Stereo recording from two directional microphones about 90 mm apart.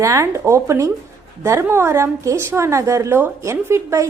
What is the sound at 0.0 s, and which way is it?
A woman's voice, 35° right (ahead or behind).